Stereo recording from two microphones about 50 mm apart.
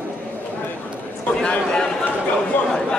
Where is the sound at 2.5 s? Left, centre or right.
Left.